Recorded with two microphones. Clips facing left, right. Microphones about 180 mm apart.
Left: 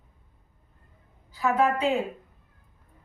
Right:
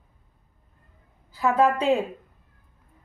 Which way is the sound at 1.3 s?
30° right (ahead or behind).